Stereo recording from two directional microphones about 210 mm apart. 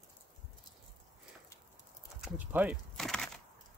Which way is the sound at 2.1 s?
5° right (ahead or behind).